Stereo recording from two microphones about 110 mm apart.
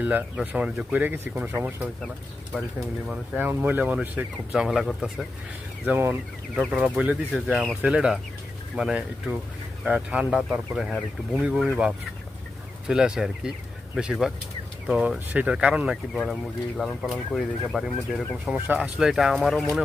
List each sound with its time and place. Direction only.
0.0 s speech: 15° right (ahead or behind)
2.5 s speech: centre (ahead or behind)
3.1 s speech: 15° right (ahead or behind); by 5.2 s centre (ahead or behind)
5.8 s speech: 15° right (ahead or behind)
7.5 s speech: centre (ahead or behind)
12.9 s speech: 5° right (ahead or behind)
16.1 s speech: 5° left (ahead or behind)
18.5 s speech: 10° right (ahead or behind)